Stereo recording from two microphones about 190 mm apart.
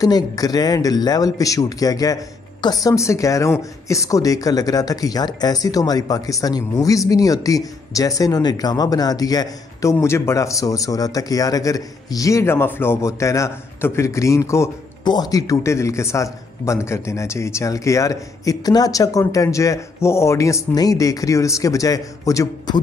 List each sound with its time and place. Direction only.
0.0 s speech: 20° left (ahead or behind)